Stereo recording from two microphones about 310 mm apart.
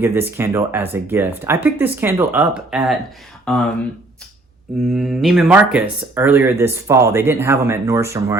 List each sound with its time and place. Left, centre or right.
0.0 s speech: centre
4.9 s speech: centre